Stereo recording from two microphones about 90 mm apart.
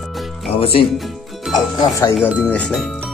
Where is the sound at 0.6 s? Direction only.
90° left.